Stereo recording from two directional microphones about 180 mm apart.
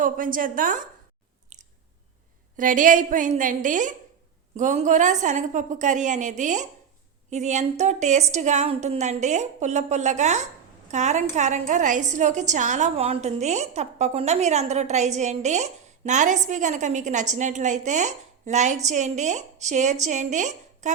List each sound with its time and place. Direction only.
0.0 s a woman's voice: 50° right (ahead or behind)
1.5 s chewing: 40° right (ahead or behind)
2.6 s a woman's voice: 45° right (ahead or behind)